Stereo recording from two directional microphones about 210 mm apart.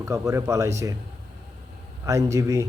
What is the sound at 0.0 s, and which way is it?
Speech, 15° right (ahead or behind).